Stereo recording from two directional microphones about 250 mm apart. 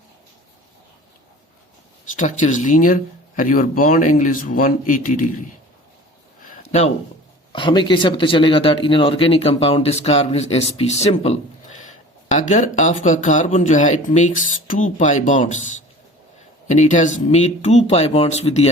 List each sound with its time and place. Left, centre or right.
2.1 s speech: left
6.4 s a sound: left
7.5 s speech: centre
16.6 s speech: left